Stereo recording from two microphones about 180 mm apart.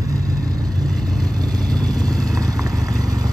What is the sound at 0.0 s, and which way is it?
Vehicle, 20° right (ahead or behind).